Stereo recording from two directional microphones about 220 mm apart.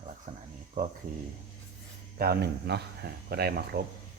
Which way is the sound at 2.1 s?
45° right (ahead or behind).